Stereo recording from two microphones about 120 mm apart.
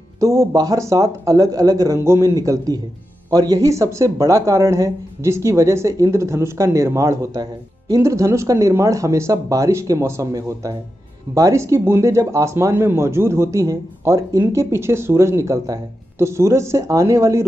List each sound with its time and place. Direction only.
0.2 s speech: 25° right (ahead or behind)